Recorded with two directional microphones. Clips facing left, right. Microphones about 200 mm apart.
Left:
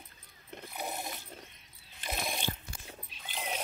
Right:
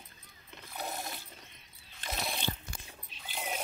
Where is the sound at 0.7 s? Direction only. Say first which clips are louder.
Even; 15° left (ahead or behind).